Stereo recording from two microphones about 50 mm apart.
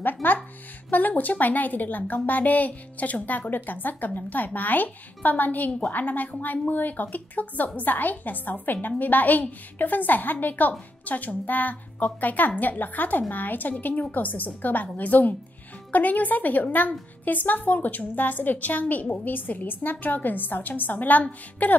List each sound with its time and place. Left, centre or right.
0.0 s music: left
0.8 s a woman's voice: left